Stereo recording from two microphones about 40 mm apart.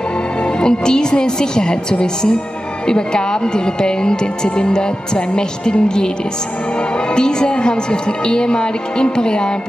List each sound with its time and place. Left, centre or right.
0.6 s a woman's voice: centre
7.2 s a woman's voice: centre